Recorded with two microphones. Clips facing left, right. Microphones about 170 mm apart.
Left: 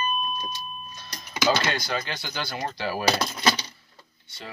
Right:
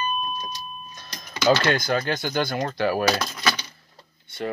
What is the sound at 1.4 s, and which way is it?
Speech, 50° right (ahead or behind).